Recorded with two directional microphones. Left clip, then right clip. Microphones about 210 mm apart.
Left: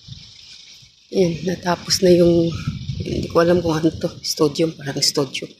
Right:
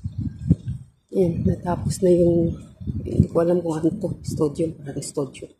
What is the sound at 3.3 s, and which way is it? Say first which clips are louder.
Speech: left 5 dB; centre (ahead or behind).